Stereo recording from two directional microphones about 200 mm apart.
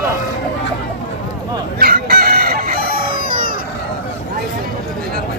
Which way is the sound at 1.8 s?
50° right (ahead or behind).